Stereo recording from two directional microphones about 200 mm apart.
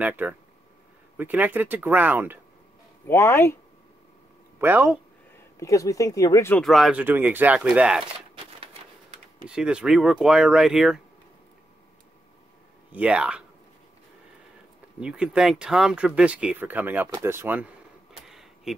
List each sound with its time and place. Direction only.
0.0 s speech: 10° right (ahead or behind)
3.1 s speech: 10° left (ahead or behind)
4.6 s speech: 10° right (ahead or behind)
5.6 s speech: 15° left (ahead or behind)
6.6 s speech: centre (ahead or behind)
9.5 s speech: 5° right (ahead or behind)
12.9 s speech: 5° right (ahead or behind)
15.0 s speech: 5° right (ahead or behind)
18.2 s a sound: centre (ahead or behind)